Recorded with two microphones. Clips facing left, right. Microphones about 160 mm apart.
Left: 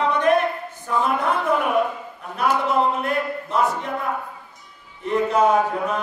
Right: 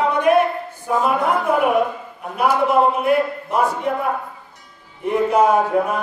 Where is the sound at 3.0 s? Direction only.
10° right (ahead or behind).